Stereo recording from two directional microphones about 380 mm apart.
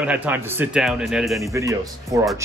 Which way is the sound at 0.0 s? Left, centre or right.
Centre.